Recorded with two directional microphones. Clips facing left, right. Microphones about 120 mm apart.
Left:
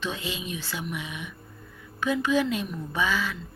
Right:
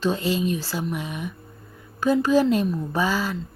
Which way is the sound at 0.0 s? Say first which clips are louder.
Right 10 dB; 40° right (ahead or behind).